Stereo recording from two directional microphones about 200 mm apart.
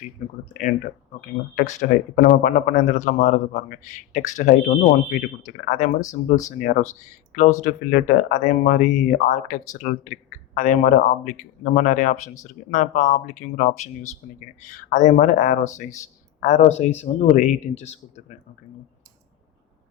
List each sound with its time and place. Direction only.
1.5 s speech: 35° left (ahead or behind)